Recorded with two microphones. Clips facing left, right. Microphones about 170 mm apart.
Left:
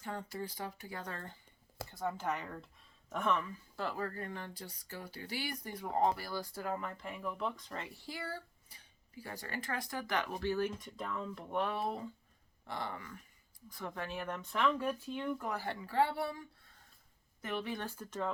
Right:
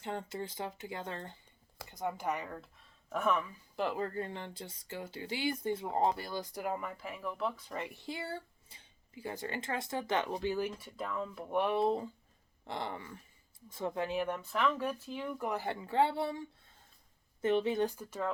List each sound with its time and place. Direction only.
0.0 s speech: 25° right (ahead or behind); by 3.4 s 5° right (ahead or behind)
3.8 s speech: 20° right (ahead or behind)